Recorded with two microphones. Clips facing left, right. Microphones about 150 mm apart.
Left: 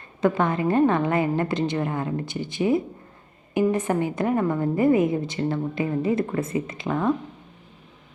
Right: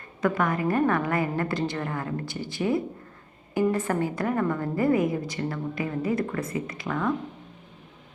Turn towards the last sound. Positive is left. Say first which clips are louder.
# left 4 dB
turn(degrees=25)  # may be behind; listen again after turning